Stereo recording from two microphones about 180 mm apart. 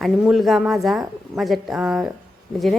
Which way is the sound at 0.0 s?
Centre (ahead or behind).